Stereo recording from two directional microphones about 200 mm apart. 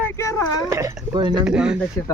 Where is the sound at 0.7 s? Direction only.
15° right (ahead or behind).